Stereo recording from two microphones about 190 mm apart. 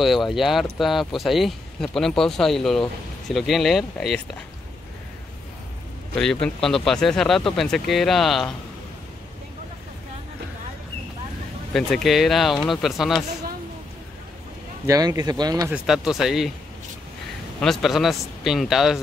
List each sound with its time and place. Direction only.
0.0 s speech: centre (ahead or behind)
6.1 s speech: 5° left (ahead or behind)
11.7 s speech: centre (ahead or behind)
14.9 s speech: 20° right (ahead or behind)
15.7 s speech: centre (ahead or behind)
17.6 s speech: centre (ahead or behind)